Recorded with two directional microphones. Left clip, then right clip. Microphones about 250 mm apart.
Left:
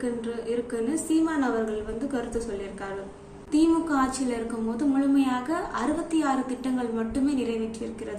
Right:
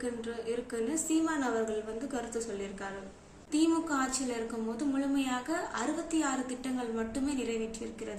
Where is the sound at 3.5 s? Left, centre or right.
Centre.